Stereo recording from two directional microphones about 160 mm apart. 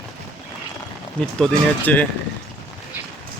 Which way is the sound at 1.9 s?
10° left (ahead or behind).